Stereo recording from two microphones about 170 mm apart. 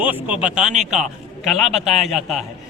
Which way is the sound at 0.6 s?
45° right (ahead or behind).